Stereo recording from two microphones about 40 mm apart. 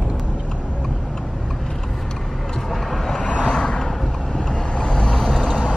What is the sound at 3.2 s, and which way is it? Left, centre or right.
Vehicle, left.